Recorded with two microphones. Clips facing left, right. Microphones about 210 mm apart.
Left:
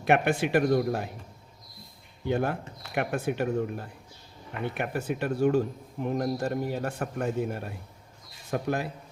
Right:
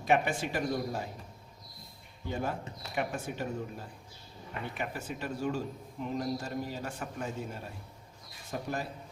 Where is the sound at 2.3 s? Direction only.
65° left (ahead or behind).